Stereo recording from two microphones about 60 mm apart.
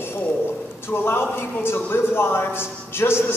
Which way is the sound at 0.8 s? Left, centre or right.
Left.